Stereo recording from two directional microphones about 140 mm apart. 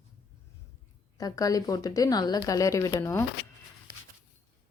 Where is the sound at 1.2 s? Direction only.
25° left (ahead or behind).